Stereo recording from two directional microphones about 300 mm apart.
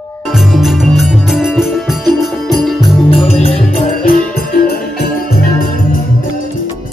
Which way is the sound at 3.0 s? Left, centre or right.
Centre.